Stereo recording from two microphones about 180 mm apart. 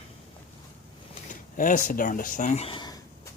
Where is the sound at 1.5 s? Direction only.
50° left (ahead or behind); by 3.0 s 25° left (ahead or behind).